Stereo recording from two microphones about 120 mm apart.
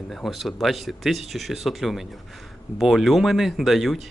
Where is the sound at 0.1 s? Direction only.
5° left (ahead or behind).